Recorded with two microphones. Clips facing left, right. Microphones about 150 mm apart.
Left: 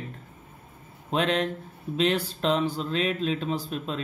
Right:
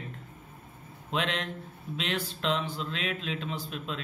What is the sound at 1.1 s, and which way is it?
Speech, 40° left (ahead or behind).